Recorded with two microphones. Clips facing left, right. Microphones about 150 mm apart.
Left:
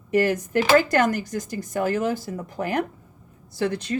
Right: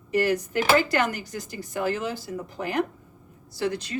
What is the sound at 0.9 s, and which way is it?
Speech, 45° left (ahead or behind).